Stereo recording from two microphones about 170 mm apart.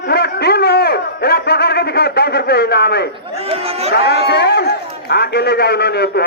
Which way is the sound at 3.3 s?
35° right (ahead or behind).